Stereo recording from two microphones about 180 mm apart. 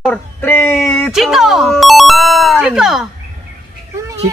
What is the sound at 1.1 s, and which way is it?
Ringtone, centre (ahead or behind).